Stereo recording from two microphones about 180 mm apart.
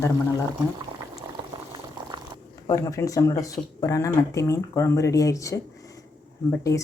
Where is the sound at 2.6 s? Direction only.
20° left (ahead or behind).